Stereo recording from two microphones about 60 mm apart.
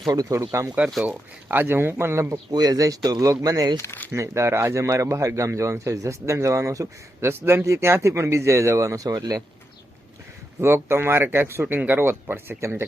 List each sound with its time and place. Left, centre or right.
0.1 s speech: right
0.3 s speech: right
1.5 s speech: right
2.3 s speech: right
4.1 s speech: right
7.2 s speech: right
10.6 s speech: right